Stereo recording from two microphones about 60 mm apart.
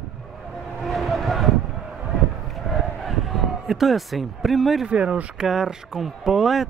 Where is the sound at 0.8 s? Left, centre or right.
Centre.